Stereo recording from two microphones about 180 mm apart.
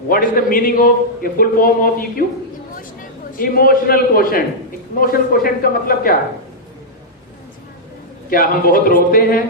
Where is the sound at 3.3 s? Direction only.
50° left (ahead or behind).